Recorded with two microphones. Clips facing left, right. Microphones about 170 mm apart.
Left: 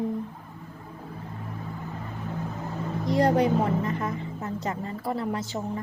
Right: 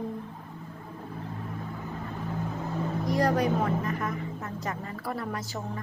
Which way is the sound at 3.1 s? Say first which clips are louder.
Left 4 dB; 25° left (ahead or behind).